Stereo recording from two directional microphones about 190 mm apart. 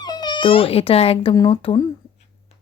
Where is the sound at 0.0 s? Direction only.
20° left (ahead or behind).